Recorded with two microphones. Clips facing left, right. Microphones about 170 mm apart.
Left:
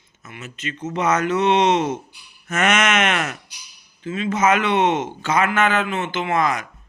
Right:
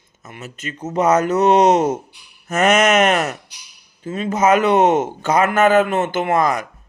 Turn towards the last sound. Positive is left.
turn(degrees=-45)  # may be behind; listen again after turning